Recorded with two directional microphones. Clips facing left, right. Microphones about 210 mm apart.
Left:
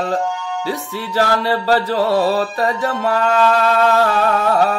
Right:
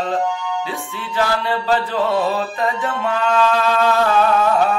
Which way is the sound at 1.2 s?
40° left (ahead or behind).